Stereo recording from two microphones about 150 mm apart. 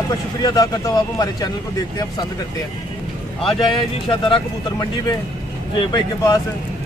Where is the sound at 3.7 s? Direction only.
30° left (ahead or behind).